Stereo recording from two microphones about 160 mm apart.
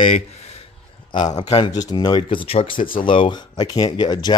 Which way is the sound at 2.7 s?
60° left (ahead or behind).